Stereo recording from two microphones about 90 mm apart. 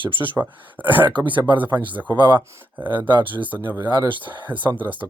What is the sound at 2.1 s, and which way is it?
Speech, 55° right (ahead or behind).